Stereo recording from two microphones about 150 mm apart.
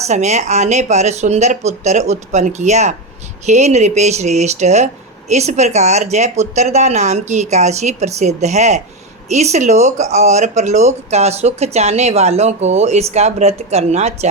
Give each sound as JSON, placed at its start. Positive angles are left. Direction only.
{"t": 0.0, "sound": "speech", "side_deg": -50}